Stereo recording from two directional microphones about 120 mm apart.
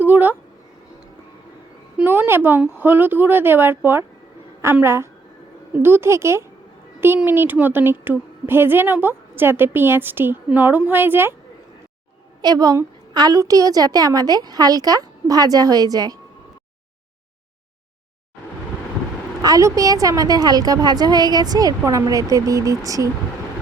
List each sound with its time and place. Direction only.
0.0 s speech: 15° right (ahead or behind)
2.0 s a woman's voice: 20° right (ahead or behind)
12.4 s a woman's voice: 35° right (ahead or behind)
19.4 s a woman's voice: 30° right (ahead or behind)